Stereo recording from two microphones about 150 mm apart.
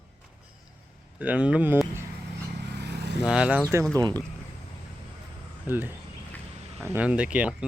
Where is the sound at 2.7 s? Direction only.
90° right.